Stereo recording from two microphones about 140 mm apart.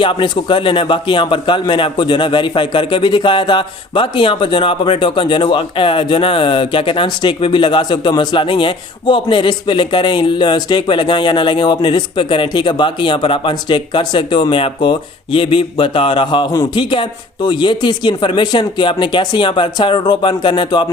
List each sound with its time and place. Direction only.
0.0 s a man's voice: 35° left (ahead or behind)